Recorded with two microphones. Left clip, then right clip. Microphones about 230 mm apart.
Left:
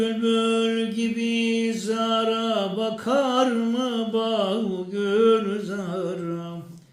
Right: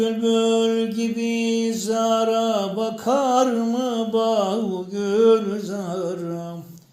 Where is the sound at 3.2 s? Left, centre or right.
Left.